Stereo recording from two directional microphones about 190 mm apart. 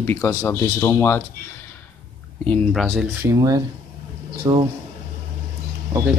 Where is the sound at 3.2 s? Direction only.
20° right (ahead or behind).